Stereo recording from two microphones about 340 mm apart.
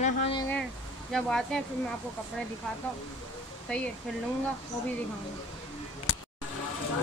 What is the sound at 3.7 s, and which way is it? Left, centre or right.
Speech, centre.